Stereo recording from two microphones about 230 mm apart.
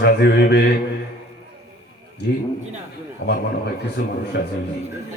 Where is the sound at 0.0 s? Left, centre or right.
Left.